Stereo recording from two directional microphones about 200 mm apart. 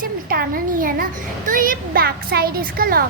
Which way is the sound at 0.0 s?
45° right (ahead or behind).